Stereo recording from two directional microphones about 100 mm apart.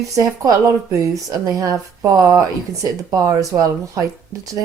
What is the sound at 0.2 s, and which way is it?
Speech, 35° right (ahead or behind).